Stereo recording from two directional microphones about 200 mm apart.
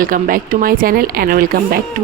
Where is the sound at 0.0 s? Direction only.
45° right (ahead or behind).